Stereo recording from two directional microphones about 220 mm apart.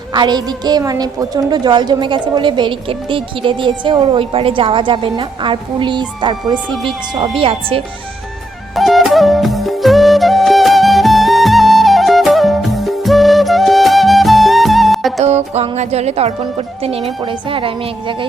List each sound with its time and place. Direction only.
0.1 s a woman's voice: 20° right (ahead or behind)
8.7 s flute: centre (ahead or behind)
15.5 s a woman's voice: 30° right (ahead or behind)